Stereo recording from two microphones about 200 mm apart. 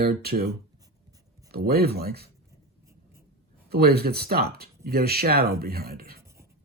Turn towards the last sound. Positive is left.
turn(degrees=-50)  # may be behind; listen again after turning